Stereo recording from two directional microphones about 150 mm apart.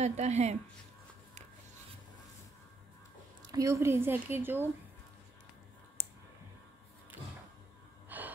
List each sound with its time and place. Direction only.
0.0 s speech: 50° right (ahead or behind)
3.5 s a woman's voice: 20° right (ahead or behind)
8.1 s gasp: 10° right (ahead or behind)